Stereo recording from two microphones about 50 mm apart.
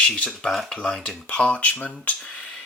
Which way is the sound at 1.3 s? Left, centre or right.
Left.